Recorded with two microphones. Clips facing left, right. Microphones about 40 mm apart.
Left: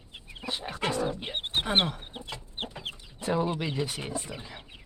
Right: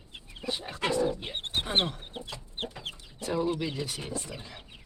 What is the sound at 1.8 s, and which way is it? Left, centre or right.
Chicken, centre.